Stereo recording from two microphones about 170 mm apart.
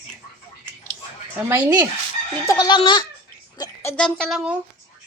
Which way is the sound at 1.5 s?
15° right (ahead or behind).